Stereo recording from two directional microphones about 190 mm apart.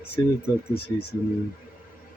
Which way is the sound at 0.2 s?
20° left (ahead or behind).